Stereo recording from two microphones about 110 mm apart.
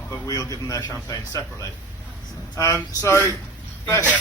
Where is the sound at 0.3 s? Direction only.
30° left (ahead or behind).